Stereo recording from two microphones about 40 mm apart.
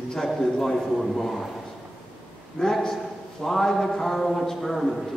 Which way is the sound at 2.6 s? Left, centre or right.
Centre.